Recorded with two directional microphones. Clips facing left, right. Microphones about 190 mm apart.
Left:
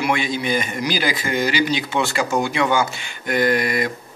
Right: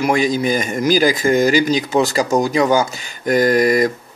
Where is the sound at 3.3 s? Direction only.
45° right (ahead or behind).